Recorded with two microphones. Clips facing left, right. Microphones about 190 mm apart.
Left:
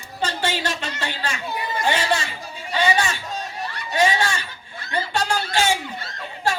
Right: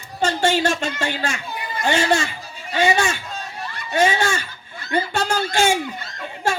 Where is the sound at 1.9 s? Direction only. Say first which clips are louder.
Right 4 dB; 45° right (ahead or behind).